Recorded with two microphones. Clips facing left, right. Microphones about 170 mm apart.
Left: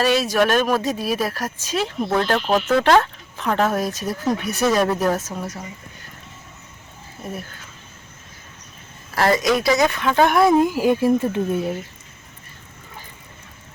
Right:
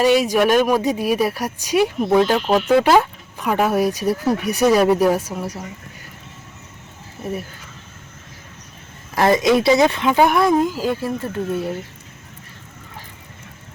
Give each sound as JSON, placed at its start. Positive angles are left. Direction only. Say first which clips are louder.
{"t": 0.0, "sound": "speech", "louder": "right 3 dB", "side_deg": -15}
{"t": 9.1, "sound": "speech", "louder": "right 3 dB", "side_deg": -20}
{"t": 10.1, "sound": "speech", "louder": "even", "side_deg": -10}
{"t": 10.3, "sound": "speech", "louder": "left 1 dB", "side_deg": 5}